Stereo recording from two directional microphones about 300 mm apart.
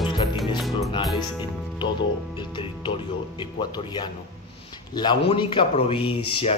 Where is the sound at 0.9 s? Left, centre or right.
Centre.